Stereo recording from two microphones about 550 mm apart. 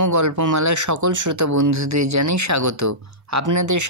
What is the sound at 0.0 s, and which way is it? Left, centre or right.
Speech, right.